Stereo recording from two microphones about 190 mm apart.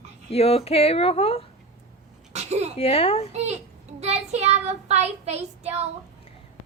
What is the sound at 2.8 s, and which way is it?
Speech, 30° left (ahead or behind).